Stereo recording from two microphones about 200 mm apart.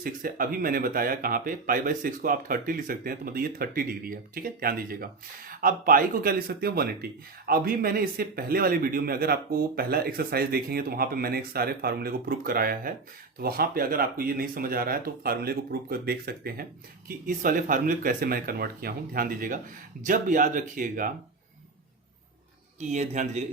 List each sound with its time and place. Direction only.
0.0 s speech: 45° right (ahead or behind)
22.8 s speech: 35° right (ahead or behind)